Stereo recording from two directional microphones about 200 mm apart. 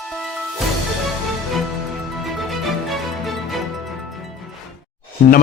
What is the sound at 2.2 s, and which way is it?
Music, centre (ahead or behind).